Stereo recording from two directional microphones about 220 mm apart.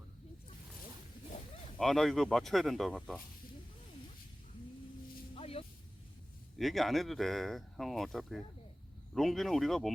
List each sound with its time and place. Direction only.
1.8 s speech: centre (ahead or behind)
5.3 s a sound: 25° left (ahead or behind)
6.6 s speech: centre (ahead or behind)